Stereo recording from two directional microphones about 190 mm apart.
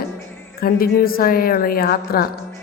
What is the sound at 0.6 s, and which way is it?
A woman's voice, 50° left (ahead or behind).